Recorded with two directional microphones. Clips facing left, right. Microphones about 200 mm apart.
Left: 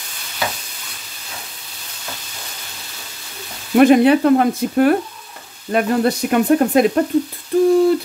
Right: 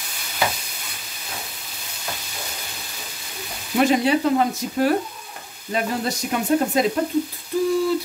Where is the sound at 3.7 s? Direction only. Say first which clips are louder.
Left 8 dB; 60° left (ahead or behind).